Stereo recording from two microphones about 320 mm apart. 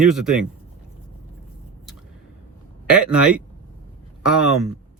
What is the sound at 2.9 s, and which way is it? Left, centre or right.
Speech, centre.